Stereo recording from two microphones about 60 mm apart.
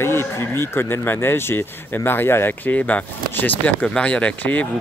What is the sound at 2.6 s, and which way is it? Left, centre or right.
Speech, left.